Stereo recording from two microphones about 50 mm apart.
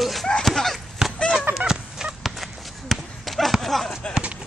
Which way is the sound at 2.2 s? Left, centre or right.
Centre.